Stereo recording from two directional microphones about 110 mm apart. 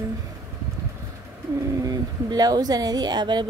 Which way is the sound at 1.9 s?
35° right (ahead or behind).